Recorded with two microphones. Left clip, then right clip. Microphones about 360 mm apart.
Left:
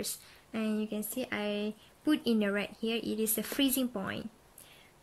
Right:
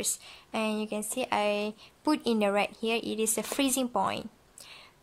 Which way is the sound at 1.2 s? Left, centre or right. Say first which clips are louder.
Right 8 dB; centre.